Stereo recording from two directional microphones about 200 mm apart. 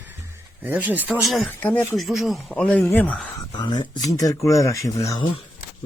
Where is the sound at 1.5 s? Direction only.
10° left (ahead or behind).